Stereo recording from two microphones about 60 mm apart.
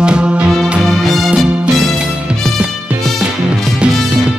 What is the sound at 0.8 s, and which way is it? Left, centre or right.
Music, centre.